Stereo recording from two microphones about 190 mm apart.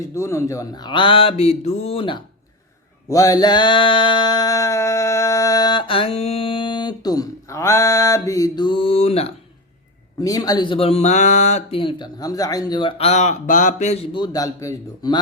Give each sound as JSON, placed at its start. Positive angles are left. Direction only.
{"t": 0.1, "sound": "speech", "side_deg": 15}
{"t": 3.1, "sound": "mantra", "side_deg": 20}
{"t": 10.2, "sound": "speech", "side_deg": 20}